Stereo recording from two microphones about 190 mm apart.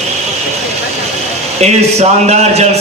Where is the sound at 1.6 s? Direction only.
35° right (ahead or behind).